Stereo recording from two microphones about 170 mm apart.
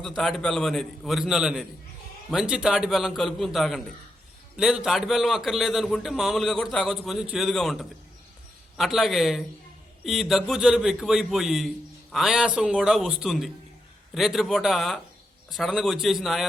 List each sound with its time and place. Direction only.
0.0 s speech: centre (ahead or behind)